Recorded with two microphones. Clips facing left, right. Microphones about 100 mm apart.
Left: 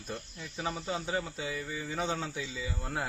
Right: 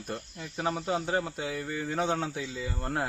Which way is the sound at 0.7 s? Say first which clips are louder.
Right 5 dB; 5° right (ahead or behind).